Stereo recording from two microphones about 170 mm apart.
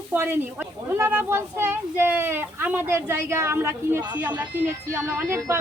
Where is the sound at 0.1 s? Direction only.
10° right (ahead or behind).